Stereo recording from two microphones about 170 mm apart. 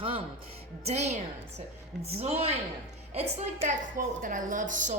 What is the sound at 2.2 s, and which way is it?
Speech, 40° right (ahead or behind).